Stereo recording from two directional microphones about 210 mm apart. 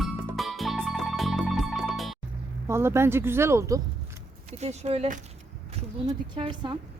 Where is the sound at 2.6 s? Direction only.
10° right (ahead or behind).